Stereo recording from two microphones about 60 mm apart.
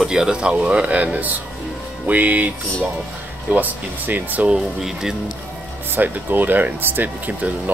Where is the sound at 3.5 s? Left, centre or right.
Right.